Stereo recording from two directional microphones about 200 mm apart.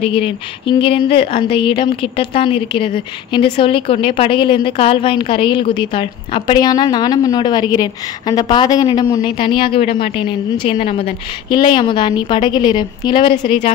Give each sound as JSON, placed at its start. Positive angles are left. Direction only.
{"t": 0.0, "sound": "a woman's voice", "side_deg": 25}